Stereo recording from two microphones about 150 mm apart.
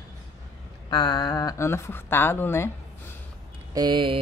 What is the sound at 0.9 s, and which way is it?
A woman's voice, 30° left (ahead or behind).